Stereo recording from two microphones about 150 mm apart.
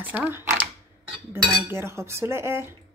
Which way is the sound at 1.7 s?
15° right (ahead or behind).